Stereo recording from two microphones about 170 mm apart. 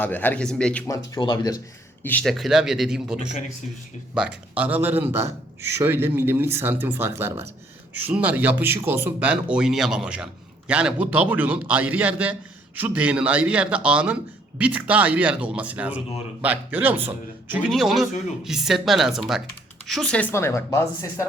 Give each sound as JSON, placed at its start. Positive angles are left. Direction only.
{"t": 0.0, "sound": "speech", "side_deg": 10}
{"t": 0.9, "sound": "speech", "side_deg": 25}
{"t": 2.0, "sound": "a man's voice", "side_deg": 5}